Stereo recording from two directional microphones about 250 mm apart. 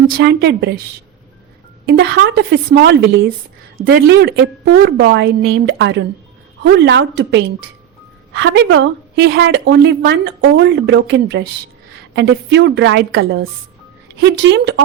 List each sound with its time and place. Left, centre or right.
0.2 s speech: right
1.9 s a woman's voice: right